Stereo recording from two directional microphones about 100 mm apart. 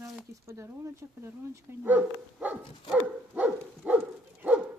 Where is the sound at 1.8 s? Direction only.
15° right (ahead or behind).